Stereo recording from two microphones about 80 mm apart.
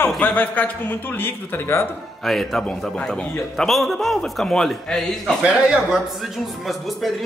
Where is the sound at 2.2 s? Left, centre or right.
Centre.